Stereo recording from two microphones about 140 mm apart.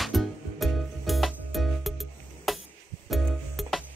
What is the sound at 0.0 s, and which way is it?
Music, centre (ahead or behind).